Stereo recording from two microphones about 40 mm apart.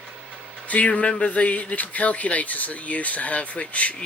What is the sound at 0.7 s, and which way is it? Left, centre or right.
Speech, left.